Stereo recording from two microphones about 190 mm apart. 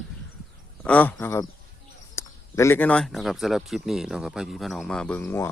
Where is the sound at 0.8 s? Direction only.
10° left (ahead or behind).